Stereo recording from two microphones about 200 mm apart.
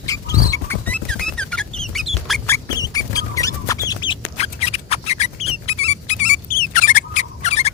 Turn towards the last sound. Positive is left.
turn(degrees=35)  # may be behind; listen again after turning